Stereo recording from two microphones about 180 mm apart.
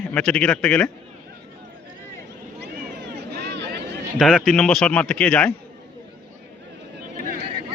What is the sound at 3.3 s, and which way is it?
Vehicle, 70° right (ahead or behind).